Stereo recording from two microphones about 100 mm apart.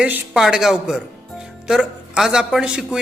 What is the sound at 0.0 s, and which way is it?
A man's voice, 10° right (ahead or behind).